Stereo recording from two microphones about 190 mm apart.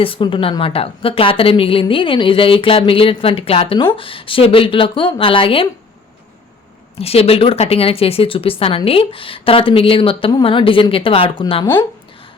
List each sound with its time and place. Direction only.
0.0 s speech: 30° left (ahead or behind)
7.0 s speech: 30° left (ahead or behind)